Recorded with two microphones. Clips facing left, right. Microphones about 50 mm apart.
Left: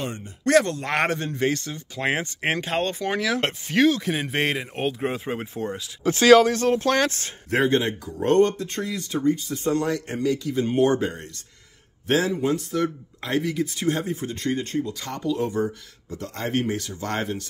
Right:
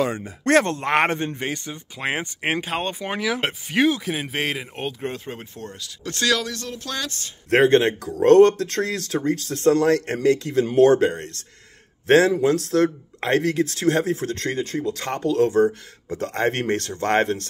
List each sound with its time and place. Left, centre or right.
0.5 s speech: right
0.8 s a man's voice: right
1.4 s speech: centre
4.0 s a man's voice: centre; by 7.3 s left
7.4 s speech: right
15.0 s speech: right
15.3 s speech: right